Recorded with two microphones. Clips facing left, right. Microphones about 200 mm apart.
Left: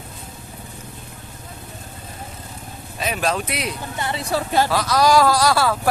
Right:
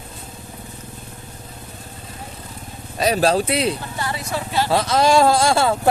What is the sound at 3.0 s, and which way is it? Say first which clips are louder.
Speech: right 6 dB; 35° right (ahead or behind).